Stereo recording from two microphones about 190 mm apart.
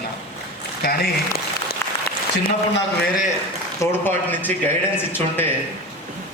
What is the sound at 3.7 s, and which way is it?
Speech, 10° left (ahead or behind).